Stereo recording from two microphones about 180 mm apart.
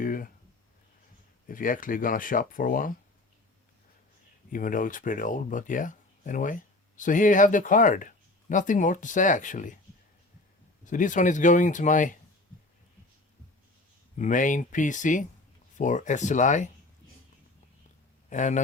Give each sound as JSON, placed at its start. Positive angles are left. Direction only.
{"t": 0.0, "sound": "a sound", "side_deg": 50}
{"t": 1.5, "sound": "speech", "side_deg": 50}
{"t": 4.5, "sound": "speech", "side_deg": 50}
{"t": 10.8, "sound": "speech", "side_deg": 45}
{"t": 14.2, "sound": "speech", "side_deg": 45}
{"t": 18.3, "sound": "a man's voice", "side_deg": 45}